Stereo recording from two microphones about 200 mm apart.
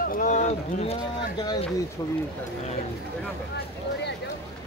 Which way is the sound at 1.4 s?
20° left (ahead or behind).